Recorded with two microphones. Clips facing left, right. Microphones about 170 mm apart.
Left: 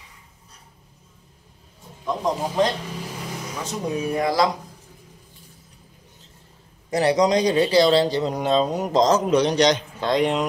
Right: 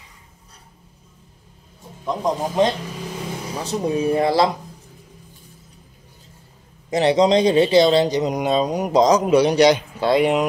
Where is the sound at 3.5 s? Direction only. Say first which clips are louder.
Right 5 dB; 30° right (ahead or behind).